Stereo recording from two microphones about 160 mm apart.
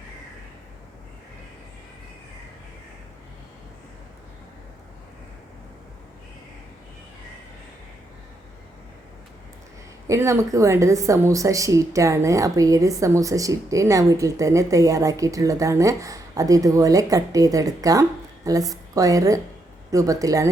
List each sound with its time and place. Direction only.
10.1 s a woman's voice: 15° right (ahead or behind)